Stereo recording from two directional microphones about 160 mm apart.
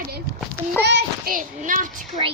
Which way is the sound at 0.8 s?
80° right.